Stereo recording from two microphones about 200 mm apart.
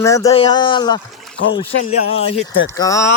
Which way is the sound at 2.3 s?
75° left (ahead or behind).